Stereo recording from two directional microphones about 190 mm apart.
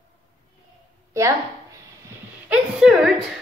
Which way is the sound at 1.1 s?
15° right (ahead or behind).